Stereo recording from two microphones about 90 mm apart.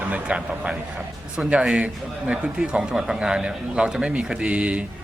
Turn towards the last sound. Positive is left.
turn(degrees=-10)  # may be behind; listen again after turning